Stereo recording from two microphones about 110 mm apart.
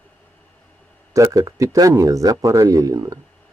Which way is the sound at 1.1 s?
30° right (ahead or behind).